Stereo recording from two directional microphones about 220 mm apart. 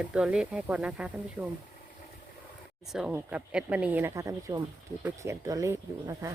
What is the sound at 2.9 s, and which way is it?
Speech, 5° right (ahead or behind).